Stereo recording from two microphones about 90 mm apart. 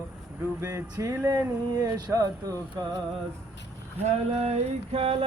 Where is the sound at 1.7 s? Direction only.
45° right (ahead or behind).